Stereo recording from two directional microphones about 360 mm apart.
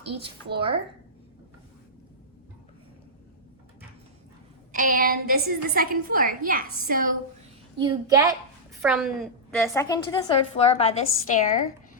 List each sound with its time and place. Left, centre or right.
0.4 s speech: centre
4.7 s a woman's voice: right
7.8 s a child's voice: centre; by 11.6 s left